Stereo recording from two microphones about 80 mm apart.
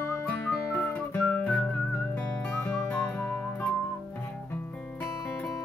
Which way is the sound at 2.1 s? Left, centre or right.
Centre.